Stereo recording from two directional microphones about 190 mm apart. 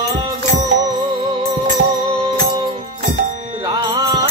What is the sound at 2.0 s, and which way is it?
Music, 30° right (ahead or behind).